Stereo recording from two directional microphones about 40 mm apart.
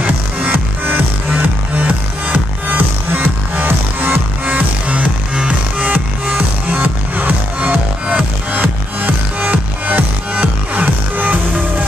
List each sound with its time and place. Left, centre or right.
0.5 s music: right
2.3 s music: right